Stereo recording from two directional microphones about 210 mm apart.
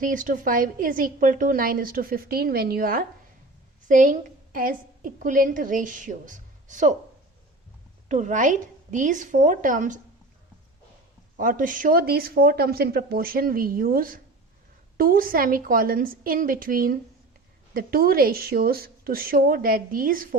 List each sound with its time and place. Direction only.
0.0 s a woman's voice: 40° right (ahead or behind)
8.0 s a woman's voice: 35° right (ahead or behind)
11.3 s speech: 40° right (ahead or behind)